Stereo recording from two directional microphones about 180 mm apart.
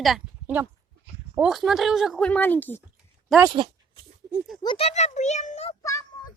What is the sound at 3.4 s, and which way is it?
Speech, 25° right (ahead or behind).